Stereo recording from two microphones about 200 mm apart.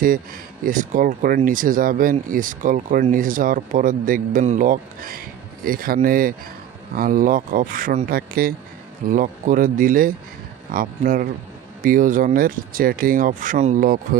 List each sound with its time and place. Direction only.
0.7 s speech: 40° right (ahead or behind)